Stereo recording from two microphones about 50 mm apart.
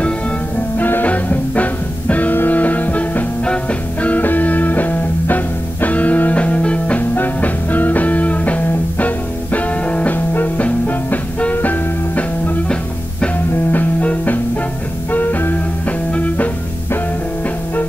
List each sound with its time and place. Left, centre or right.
0.7 s music: left
1.0 s music: left
10.1 s music: left
13.7 s music: left